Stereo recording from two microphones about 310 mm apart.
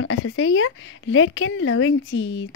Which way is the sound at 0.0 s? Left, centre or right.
Left.